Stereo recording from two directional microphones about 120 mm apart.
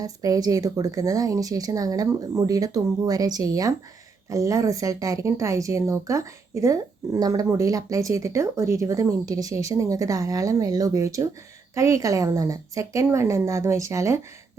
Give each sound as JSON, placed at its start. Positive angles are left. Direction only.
{"t": 0.0, "sound": "a woman's voice", "side_deg": -30}